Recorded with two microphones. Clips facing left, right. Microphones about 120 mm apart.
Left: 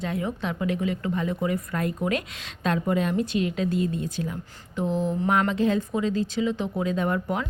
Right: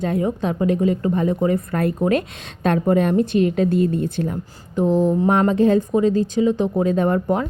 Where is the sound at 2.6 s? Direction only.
50° right (ahead or behind).